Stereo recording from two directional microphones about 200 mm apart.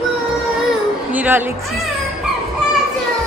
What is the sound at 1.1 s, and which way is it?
Speech, 10° right (ahead or behind).